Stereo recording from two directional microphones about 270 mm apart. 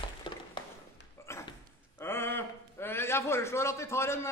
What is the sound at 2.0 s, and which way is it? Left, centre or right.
A man's voice, centre.